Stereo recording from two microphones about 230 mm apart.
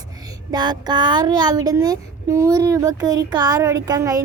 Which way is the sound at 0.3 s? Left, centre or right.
Centre.